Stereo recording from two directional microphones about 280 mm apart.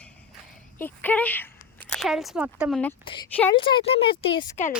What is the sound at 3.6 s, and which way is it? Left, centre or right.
Speech, centre.